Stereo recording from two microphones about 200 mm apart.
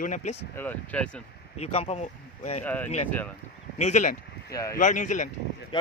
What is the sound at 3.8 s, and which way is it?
Speech, 35° left (ahead or behind).